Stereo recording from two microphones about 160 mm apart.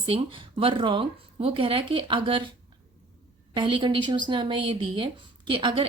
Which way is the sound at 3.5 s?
30° right (ahead or behind).